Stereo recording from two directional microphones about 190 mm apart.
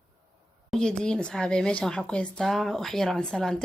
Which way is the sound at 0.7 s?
5° left (ahead or behind).